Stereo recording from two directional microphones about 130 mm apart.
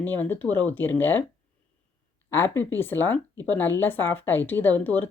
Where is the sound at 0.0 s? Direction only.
15° left (ahead or behind).